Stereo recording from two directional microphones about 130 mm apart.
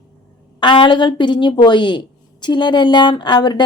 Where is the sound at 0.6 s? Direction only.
40° left (ahead or behind).